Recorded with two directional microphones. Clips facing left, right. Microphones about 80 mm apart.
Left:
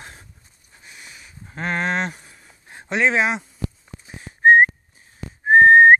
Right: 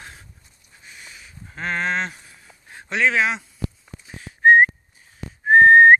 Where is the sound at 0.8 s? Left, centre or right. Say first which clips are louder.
Even; centre.